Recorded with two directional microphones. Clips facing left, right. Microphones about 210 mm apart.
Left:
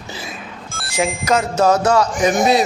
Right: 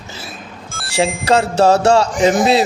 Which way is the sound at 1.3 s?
30° right (ahead or behind).